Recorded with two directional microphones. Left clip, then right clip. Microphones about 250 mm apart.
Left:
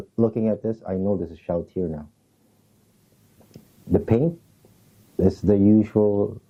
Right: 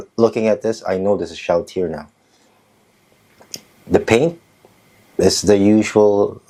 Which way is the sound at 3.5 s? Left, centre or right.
Centre.